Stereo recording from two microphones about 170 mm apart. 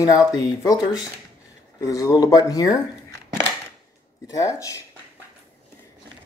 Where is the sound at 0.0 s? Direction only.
20° left (ahead or behind).